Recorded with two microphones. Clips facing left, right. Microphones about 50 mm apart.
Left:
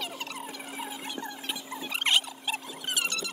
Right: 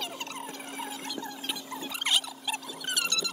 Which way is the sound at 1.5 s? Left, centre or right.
Centre.